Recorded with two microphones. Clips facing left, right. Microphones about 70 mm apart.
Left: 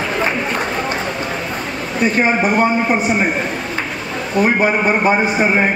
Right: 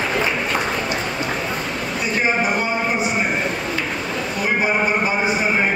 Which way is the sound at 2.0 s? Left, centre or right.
Left.